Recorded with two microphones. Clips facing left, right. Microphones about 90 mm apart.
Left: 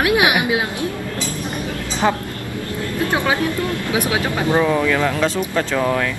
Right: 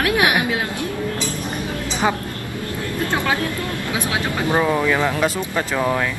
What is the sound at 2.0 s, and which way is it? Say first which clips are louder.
Speech: left 2 dB; 5° right (ahead or behind).